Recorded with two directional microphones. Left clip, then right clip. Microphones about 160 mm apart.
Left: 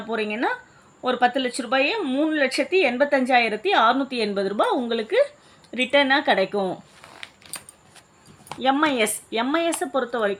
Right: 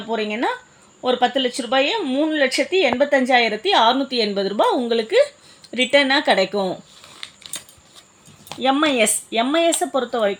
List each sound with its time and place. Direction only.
0.1 s speech: 35° right (ahead or behind)
8.6 s speech: 50° right (ahead or behind)